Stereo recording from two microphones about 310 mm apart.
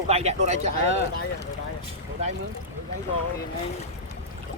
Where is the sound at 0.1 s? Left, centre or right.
Right.